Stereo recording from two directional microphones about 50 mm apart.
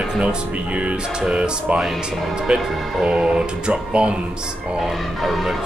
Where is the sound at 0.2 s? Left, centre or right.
Right.